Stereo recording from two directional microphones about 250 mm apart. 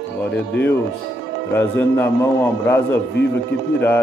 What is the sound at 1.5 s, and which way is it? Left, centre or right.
A man's voice, centre.